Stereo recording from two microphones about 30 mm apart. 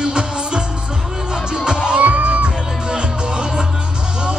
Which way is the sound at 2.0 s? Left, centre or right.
Right.